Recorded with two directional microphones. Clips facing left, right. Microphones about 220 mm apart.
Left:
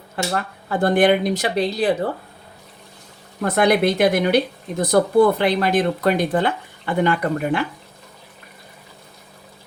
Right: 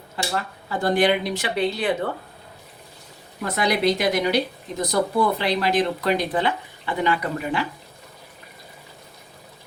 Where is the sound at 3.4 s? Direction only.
55° left (ahead or behind).